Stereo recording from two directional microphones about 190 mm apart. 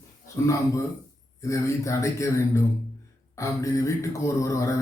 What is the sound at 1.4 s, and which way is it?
Mantra, 15° left (ahead or behind).